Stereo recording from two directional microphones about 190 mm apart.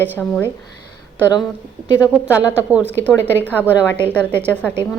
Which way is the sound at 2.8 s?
10° left (ahead or behind).